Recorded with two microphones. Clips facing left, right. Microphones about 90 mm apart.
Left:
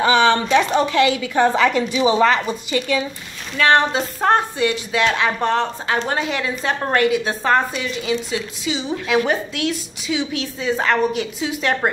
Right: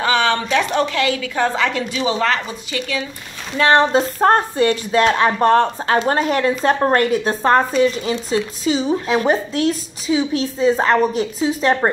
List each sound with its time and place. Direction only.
0.0 s a woman's voice: 20° left (ahead or behind)
3.5 s a woman's voice: 30° right (ahead or behind)